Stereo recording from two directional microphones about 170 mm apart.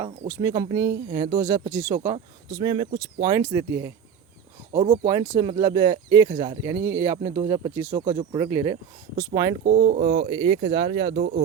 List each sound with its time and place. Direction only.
0.0 s speech: 20° right (ahead or behind)
6.7 s speech: 15° right (ahead or behind)
7.4 s speech: 35° right (ahead or behind)
11.1 s speech: 65° right (ahead or behind)